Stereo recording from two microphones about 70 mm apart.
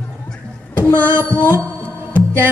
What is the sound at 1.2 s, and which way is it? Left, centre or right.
Music, left.